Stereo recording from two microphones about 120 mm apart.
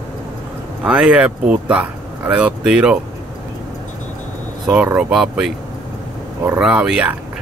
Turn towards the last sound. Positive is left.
turn(degrees=-10)  # may be behind; listen again after turning